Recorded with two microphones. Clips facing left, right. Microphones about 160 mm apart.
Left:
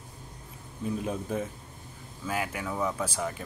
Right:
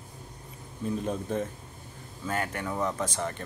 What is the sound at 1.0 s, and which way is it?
Speech, 5° left (ahead or behind).